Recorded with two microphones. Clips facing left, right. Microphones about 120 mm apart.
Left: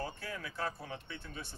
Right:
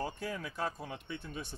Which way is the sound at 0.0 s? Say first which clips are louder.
Right 3 dB; 15° right (ahead or behind).